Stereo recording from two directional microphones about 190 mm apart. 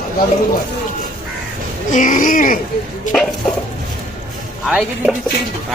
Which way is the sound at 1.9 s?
45° left (ahead or behind).